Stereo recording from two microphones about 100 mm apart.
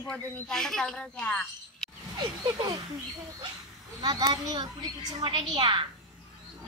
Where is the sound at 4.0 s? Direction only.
40° right (ahead or behind).